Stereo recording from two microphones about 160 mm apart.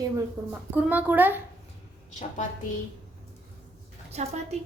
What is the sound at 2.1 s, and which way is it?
Speech, 50° left (ahead or behind).